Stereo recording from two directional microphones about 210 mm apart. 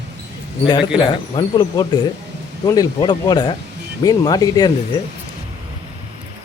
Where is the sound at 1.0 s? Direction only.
20° left (ahead or behind).